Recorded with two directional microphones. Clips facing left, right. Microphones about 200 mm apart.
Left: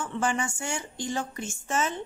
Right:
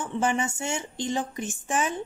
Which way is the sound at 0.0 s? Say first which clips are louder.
Right 2 dB; 20° right (ahead or behind).